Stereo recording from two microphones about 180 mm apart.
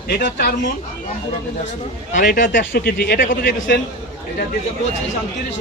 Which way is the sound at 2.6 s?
60° left (ahead or behind).